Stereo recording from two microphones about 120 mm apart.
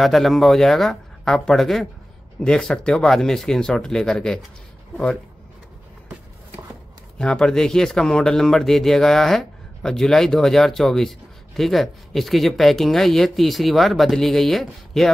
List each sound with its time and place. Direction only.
0.0 s speech: centre (ahead or behind)
7.2 s speech: 5° left (ahead or behind)